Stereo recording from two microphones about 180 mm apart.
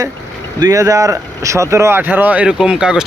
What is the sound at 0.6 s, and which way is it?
Speech, 20° right (ahead or behind).